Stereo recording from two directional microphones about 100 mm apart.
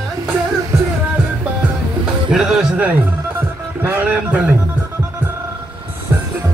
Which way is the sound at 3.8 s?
20° right (ahead or behind).